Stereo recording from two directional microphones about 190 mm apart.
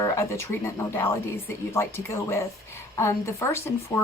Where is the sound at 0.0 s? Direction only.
15° left (ahead or behind).